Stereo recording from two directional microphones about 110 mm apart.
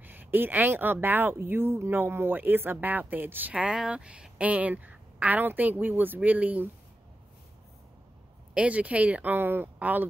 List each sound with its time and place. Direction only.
0.0 s speech: 15° right (ahead or behind)
8.5 s speech: 10° right (ahead or behind)